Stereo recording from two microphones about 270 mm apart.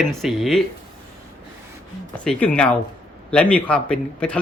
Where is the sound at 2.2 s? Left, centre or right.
Centre.